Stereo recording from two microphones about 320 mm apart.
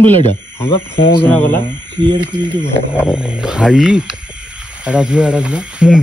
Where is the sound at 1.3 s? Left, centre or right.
Centre.